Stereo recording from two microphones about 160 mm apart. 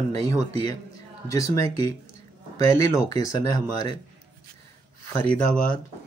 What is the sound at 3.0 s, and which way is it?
Speech, 20° left (ahead or behind).